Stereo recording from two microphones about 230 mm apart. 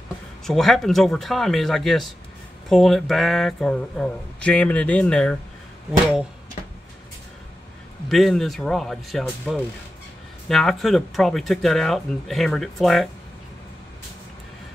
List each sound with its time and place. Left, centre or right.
0.5 s speech: centre
8.1 s speech: centre